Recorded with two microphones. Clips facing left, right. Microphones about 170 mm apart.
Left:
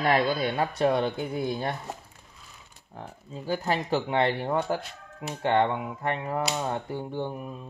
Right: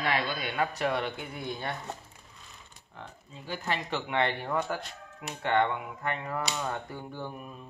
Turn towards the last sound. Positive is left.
turn(degrees=25)  # may be behind; listen again after turning